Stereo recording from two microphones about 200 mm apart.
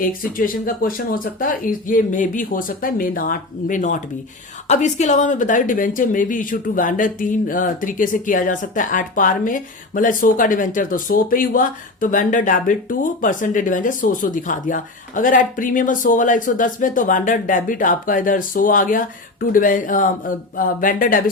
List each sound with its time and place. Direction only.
0.0 s speech: 45° left (ahead or behind)